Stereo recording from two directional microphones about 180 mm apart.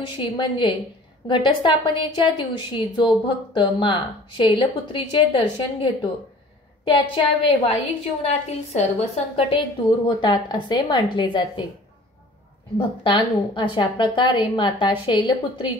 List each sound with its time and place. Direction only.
0.2 s a woman's voice: 25° left (ahead or behind)
10.0 s a woman's voice: 25° left (ahead or behind)
13.0 s a woman's voice: 25° left (ahead or behind)